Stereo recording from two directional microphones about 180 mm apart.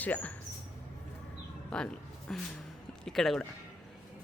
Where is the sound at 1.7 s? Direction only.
5° left (ahead or behind).